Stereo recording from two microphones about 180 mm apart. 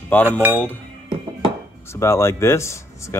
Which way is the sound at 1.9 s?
15° left (ahead or behind).